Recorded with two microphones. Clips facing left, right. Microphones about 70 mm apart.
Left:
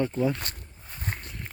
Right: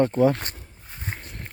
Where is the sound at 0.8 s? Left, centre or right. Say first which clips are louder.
Even; centre.